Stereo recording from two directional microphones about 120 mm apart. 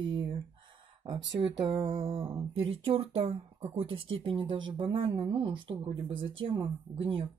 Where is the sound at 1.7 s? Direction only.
50° right (ahead or behind).